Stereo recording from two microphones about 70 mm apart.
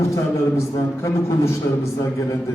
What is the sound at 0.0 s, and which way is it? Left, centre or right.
A man's voice, left.